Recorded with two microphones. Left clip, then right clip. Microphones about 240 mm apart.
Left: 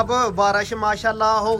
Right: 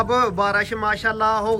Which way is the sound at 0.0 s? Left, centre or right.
Centre.